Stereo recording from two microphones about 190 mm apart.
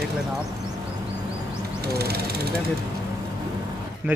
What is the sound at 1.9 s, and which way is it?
Speech, 55° right (ahead or behind).